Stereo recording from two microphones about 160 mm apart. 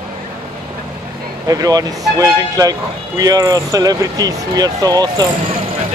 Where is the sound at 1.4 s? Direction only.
20° right (ahead or behind).